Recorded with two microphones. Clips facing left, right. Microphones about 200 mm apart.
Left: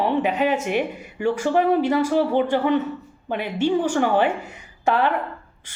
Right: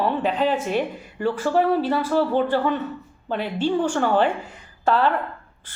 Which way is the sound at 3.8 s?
15° left (ahead or behind).